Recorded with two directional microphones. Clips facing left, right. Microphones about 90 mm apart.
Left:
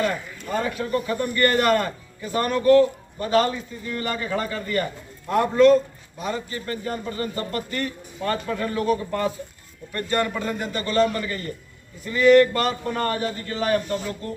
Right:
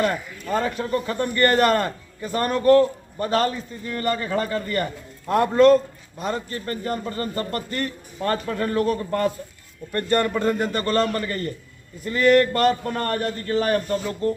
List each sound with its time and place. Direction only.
0.8 s a man's voice: 40° right (ahead or behind)